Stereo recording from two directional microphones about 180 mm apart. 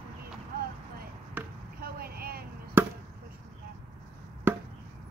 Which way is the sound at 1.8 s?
55° right (ahead or behind).